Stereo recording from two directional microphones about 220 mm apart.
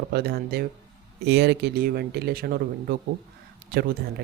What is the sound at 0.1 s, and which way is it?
Speech, 45° right (ahead or behind).